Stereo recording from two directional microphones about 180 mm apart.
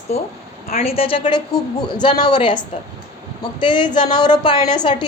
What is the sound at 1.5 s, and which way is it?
Speech, 5° left (ahead or behind).